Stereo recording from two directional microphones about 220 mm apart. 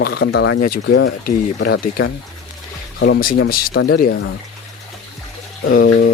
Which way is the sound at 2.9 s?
55° left (ahead or behind).